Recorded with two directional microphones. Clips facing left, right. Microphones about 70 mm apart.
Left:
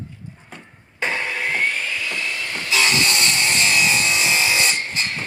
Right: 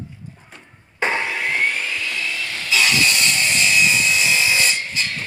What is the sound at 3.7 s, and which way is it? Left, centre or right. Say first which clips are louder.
Wood: right 1 dB; left.